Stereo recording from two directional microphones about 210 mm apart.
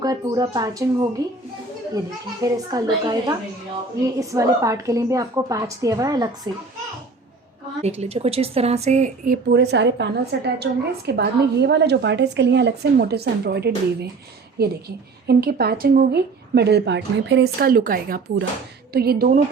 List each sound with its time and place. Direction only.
0.0 s a woman's voice: 20° right (ahead or behind)
2.4 s a woman's voice: 15° right (ahead or behind)
7.8 s a woman's voice: 30° right (ahead or behind); by 19.4 s 45° right (ahead or behind)